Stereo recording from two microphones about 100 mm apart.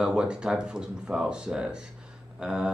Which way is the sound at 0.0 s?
10° right (ahead or behind).